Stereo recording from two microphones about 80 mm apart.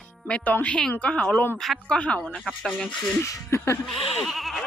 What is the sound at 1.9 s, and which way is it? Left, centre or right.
Speech, centre.